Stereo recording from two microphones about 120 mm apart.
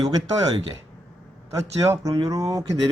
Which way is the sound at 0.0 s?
35° right (ahead or behind).